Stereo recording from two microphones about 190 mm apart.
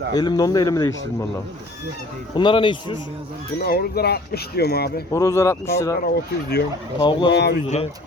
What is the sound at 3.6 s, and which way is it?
Speech, 55° left (ahead or behind).